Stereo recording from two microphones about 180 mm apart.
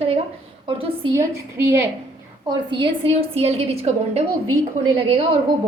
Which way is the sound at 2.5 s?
25° right (ahead or behind).